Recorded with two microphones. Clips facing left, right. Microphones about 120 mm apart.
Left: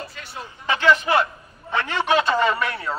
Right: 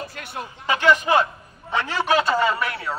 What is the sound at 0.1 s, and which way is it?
Speech, 55° right (ahead or behind).